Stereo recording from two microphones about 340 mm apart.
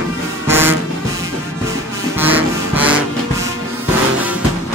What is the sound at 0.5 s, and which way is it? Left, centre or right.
Music, centre.